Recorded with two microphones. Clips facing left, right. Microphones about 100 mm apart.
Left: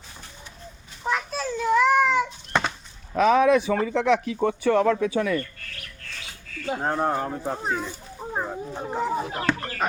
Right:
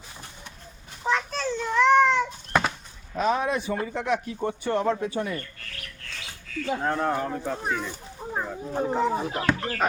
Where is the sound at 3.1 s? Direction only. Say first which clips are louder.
Left 7 dB; 90° left.